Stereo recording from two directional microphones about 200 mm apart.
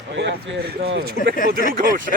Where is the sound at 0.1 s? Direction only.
60° right (ahead or behind).